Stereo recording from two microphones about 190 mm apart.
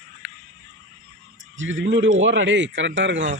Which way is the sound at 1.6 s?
85° right.